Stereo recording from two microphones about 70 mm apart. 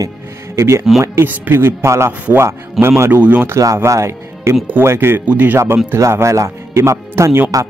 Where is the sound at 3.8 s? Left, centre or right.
Right.